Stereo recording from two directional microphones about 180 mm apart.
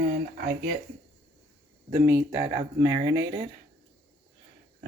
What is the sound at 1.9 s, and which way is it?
Speech, 15° right (ahead or behind).